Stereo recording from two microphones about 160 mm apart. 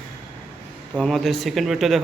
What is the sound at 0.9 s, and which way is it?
Speech, centre (ahead or behind).